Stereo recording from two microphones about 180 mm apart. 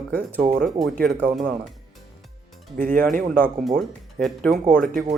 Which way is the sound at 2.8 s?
50° right (ahead or behind).